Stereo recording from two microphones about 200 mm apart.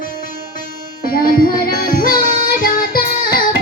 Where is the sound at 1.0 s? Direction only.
45° left (ahead or behind).